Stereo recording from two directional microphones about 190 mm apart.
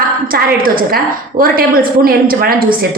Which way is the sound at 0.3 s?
50° right (ahead or behind).